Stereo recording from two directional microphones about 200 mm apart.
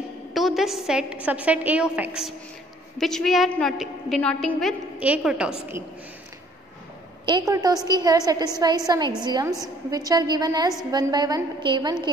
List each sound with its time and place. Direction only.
0.3 s a woman's voice: centre (ahead or behind)
7.2 s a woman's voice: 20° right (ahead or behind)